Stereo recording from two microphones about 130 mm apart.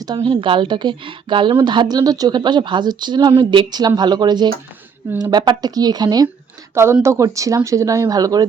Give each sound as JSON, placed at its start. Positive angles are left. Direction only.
{"t": 0.0, "sound": "speech", "side_deg": -35}